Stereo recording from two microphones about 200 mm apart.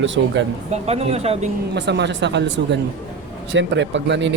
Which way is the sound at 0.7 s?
30° right (ahead or behind).